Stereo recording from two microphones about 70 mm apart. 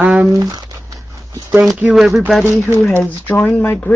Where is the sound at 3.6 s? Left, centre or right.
Left.